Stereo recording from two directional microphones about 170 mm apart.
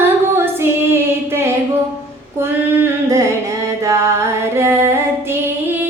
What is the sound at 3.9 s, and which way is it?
Music, 15° right (ahead or behind).